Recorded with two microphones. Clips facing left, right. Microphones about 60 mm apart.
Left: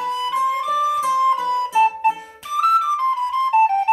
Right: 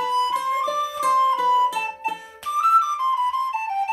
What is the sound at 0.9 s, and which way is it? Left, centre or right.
Music, right.